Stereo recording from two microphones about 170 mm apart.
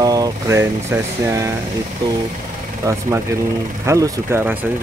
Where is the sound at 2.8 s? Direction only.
20° right (ahead or behind).